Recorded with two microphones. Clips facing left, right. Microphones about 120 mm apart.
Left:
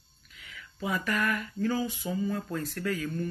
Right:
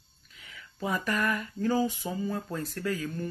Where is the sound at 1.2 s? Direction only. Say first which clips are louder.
Even; 30° right (ahead or behind).